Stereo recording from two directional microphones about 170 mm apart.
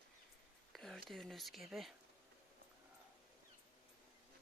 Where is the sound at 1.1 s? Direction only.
Centre (ahead or behind).